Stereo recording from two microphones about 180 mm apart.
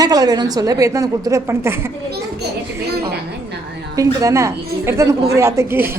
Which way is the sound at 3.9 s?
20° right (ahead or behind).